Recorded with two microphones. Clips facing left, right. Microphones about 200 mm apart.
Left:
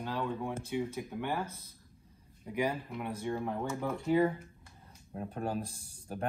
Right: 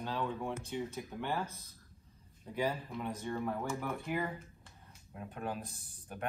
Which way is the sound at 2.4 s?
15° left (ahead or behind).